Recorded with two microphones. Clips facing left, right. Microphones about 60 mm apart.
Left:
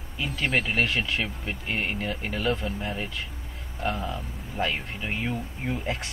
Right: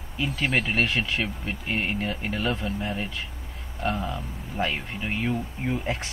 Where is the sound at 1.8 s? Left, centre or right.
Right.